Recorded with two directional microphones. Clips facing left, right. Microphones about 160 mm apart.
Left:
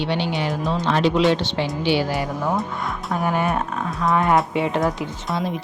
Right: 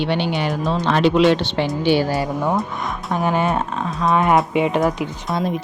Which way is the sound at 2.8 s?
25° right (ahead or behind).